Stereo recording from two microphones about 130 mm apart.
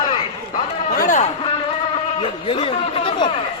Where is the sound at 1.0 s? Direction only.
75° left (ahead or behind).